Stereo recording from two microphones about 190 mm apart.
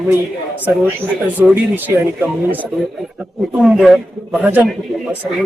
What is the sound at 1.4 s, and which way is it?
Speech, 10° right (ahead or behind).